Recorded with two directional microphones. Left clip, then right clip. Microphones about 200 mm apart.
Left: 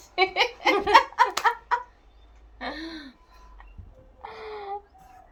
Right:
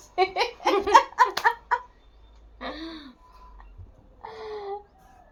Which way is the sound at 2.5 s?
15° left (ahead or behind).